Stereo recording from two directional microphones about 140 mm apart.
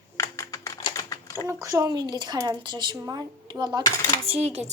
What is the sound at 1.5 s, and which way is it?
Speech, 25° right (ahead or behind).